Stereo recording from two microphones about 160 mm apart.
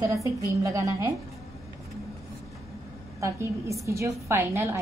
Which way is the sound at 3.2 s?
20° right (ahead or behind).